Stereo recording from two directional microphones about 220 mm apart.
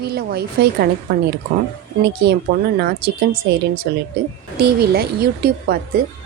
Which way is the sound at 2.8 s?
45° right (ahead or behind).